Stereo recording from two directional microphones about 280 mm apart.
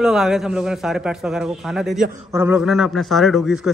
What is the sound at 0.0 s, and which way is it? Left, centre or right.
A child's voice, centre.